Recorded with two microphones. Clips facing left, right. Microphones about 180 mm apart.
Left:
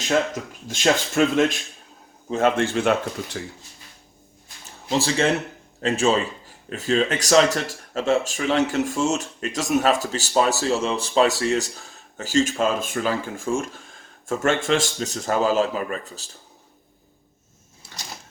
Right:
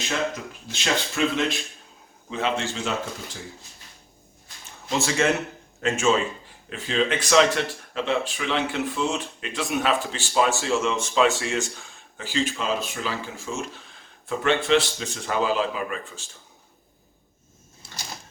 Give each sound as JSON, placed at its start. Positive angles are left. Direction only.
{"t": 0.7, "sound": "a man's voice", "side_deg": 50}
{"t": 4.9, "sound": "speech", "side_deg": 35}